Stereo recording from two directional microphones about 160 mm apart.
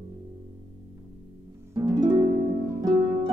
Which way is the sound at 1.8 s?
25° right (ahead or behind).